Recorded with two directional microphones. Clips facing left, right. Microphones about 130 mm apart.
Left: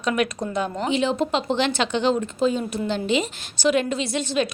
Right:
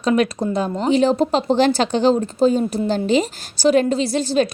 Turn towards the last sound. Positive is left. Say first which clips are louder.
# right 6 dB
turn(degrees=-35)  # may be behind; listen again after turning